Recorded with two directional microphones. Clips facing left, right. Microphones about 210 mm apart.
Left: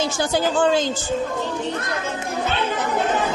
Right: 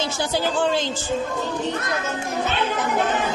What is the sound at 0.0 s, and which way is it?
Speech, 50° left (ahead or behind).